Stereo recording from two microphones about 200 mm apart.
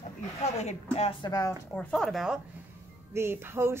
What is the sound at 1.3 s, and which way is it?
Speech, 15° left (ahead or behind).